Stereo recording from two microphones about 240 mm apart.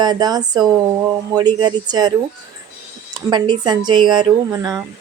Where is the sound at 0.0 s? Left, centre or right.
Centre.